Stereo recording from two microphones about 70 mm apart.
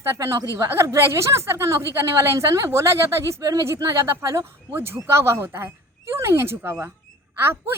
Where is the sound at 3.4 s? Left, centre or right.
Right.